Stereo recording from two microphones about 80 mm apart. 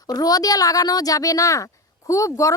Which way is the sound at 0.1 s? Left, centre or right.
Left.